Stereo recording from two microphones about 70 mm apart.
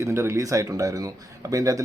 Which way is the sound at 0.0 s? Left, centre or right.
Right.